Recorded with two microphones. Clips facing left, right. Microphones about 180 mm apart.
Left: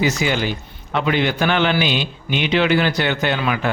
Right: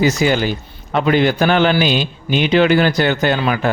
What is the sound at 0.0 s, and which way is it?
A man's voice, 40° right (ahead or behind).